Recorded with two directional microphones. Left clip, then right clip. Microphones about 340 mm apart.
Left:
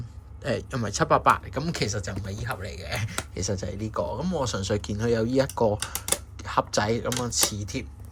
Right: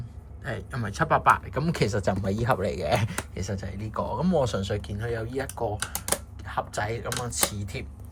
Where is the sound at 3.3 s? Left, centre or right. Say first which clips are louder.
Left 4 dB; centre.